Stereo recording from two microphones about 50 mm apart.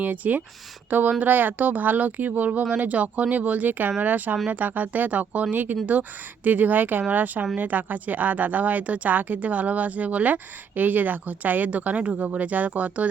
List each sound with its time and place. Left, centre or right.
0.0 s speech: right